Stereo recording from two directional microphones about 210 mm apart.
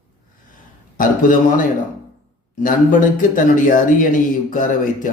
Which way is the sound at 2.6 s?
40° left (ahead or behind).